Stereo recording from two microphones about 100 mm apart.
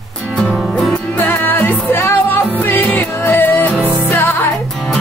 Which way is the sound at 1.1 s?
20° left (ahead or behind).